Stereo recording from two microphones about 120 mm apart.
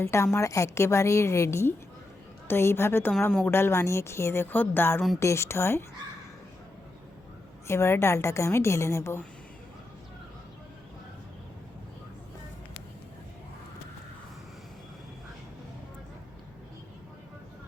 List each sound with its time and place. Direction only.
0.0 s a woman's voice: 20° left (ahead or behind)
7.7 s a woman's voice: 20° left (ahead or behind)